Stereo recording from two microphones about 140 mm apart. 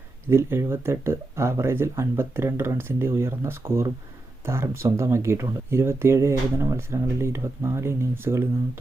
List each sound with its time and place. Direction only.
0.3 s speech: 15° right (ahead or behind)